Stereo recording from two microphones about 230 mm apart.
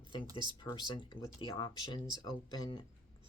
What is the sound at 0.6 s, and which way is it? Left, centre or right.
Speech, centre.